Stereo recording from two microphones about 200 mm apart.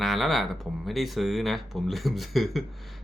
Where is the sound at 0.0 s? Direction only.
Centre (ahead or behind).